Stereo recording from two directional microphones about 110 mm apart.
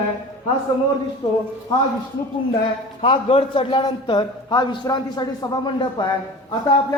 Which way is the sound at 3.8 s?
40° left (ahead or behind).